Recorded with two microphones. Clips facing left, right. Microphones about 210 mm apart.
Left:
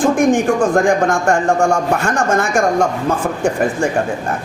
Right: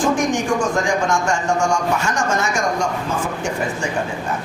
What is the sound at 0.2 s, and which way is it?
A man's voice, 55° left (ahead or behind).